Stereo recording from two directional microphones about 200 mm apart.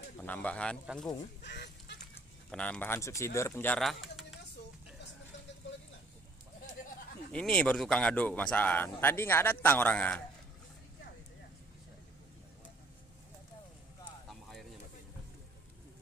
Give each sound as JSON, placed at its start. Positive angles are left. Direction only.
{"t": 0.2, "sound": "speech", "side_deg": 10}
{"t": 1.4, "sound": "speech", "side_deg": 60}
{"t": 2.5, "sound": "speech", "side_deg": 5}
{"t": 7.3, "sound": "speech", "side_deg": 5}
{"t": 14.3, "sound": "a sound", "side_deg": 0}